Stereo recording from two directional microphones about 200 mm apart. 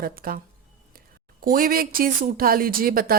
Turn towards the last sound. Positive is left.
turn(degrees=-45)  # may be behind; listen again after turning